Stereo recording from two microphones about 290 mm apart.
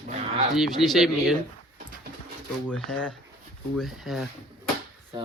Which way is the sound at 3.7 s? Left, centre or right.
Centre.